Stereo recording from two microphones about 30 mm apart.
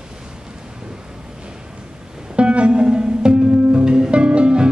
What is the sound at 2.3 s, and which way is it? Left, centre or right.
Music, right.